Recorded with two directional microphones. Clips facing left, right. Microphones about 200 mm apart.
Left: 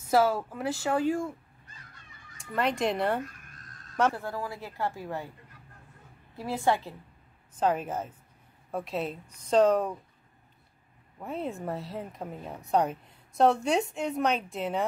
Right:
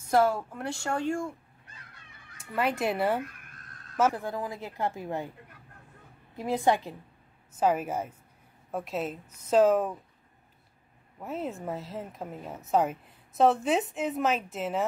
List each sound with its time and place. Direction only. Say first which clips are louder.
0.1 s speech: even; 5° left (ahead or behind)
2.3 s speech: even; 5° right (ahead or behind)
6.3 s a woman's voice: right 2 dB; 15° right (ahead or behind)
11.1 s speech: even; centre (ahead or behind)